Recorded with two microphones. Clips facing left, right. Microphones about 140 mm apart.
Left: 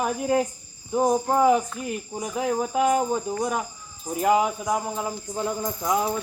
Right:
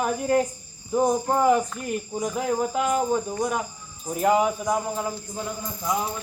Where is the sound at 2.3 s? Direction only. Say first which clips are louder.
Left 2 dB; 20° left (ahead or behind).